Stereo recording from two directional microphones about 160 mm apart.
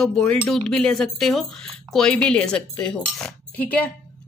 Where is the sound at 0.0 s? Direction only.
5° left (ahead or behind).